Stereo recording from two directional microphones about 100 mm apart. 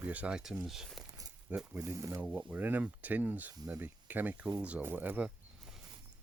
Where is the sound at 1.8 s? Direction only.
30° right (ahead or behind).